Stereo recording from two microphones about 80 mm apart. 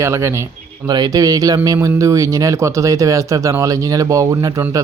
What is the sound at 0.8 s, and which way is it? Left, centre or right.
Speech, right.